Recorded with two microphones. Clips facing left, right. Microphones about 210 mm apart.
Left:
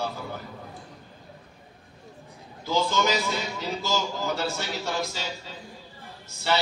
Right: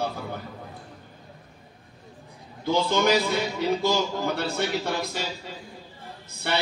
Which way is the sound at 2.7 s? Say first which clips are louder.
Right 3 dB; 60° right (ahead or behind).